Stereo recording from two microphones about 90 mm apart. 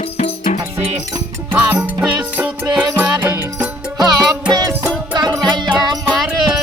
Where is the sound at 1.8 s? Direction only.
20° right (ahead or behind).